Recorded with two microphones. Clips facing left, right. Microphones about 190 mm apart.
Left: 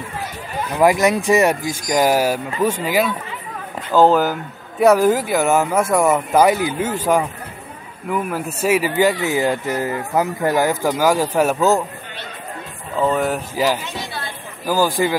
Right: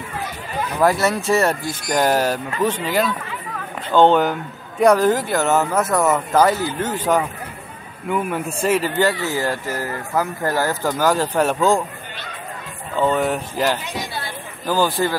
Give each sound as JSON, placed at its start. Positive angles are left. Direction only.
{"t": 0.7, "sound": "speech", "side_deg": 15}
{"t": 12.9, "sound": "speech", "side_deg": 0}